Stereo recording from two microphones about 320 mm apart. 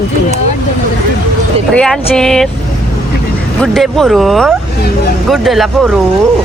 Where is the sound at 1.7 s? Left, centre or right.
Centre.